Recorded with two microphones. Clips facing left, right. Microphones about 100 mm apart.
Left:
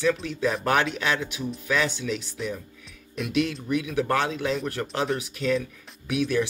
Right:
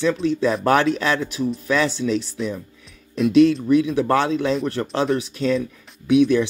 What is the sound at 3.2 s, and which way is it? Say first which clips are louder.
Speech: right 12 dB; 30° right (ahead or behind).